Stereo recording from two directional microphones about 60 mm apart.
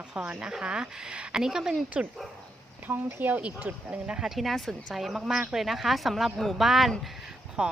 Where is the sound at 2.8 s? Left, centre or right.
Right.